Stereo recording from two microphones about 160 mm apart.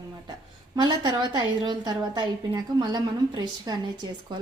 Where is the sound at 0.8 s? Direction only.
25° right (ahead or behind).